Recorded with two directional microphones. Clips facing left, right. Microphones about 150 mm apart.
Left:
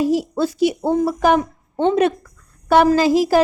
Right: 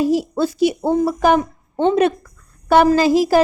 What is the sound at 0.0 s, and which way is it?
A woman's voice, 35° right (ahead or behind).